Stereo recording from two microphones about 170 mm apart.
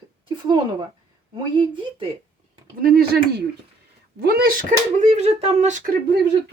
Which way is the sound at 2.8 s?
60° right (ahead or behind).